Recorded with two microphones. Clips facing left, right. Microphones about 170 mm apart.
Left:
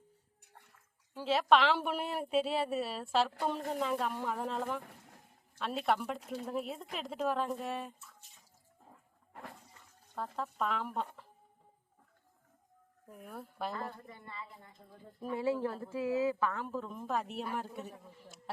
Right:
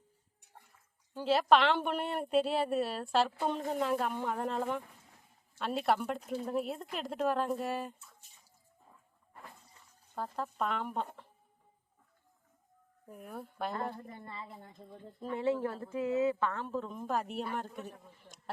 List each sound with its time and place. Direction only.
1.1 s speech: centre (ahead or behind)
9.3 s water: 80° left
10.2 s speech: centre (ahead or behind)
13.1 s speech: centre (ahead or behind)
13.8 s a woman's voice: 50° right (ahead or behind)
14.8 s speech: 10° left (ahead or behind)